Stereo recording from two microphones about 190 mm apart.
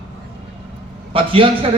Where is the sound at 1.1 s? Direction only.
30° right (ahead or behind).